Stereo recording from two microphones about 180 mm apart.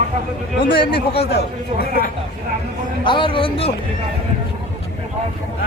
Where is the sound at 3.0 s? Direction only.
30° left (ahead or behind).